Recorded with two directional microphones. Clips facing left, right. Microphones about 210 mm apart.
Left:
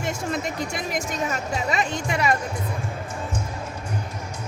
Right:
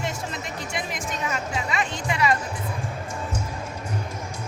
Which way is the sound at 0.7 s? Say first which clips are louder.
Left 3 dB; 40° left (ahead or behind).